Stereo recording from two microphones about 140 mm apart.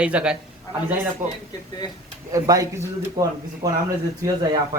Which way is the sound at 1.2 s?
65° right (ahead or behind).